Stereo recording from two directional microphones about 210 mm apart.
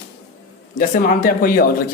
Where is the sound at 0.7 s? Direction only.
40° left (ahead or behind).